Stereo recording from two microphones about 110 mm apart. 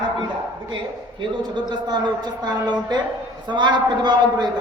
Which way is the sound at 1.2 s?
45° right (ahead or behind).